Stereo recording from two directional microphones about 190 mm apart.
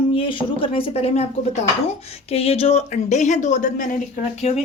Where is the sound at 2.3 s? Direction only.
30° left (ahead or behind).